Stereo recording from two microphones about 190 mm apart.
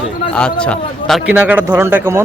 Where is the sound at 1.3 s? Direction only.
5° right (ahead or behind).